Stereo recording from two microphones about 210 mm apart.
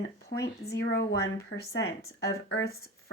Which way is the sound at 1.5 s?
65° left (ahead or behind).